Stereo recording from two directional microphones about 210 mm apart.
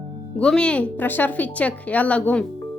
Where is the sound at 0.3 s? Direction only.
5° left (ahead or behind).